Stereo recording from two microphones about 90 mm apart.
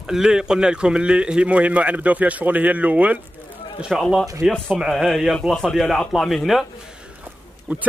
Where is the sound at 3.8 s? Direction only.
5° right (ahead or behind).